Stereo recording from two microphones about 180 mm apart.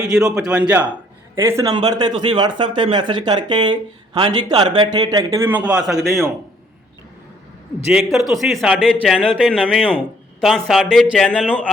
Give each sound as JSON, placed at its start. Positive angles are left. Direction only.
{"t": 0.0, "sound": "a man's voice", "side_deg": -5}
{"t": 7.9, "sound": "a man's voice", "side_deg": 0}